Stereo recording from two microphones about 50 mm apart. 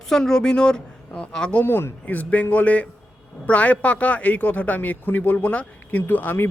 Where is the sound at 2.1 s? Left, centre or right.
Left.